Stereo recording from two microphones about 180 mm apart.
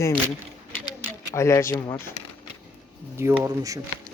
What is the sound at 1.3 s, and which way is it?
Speech, 15° left (ahead or behind).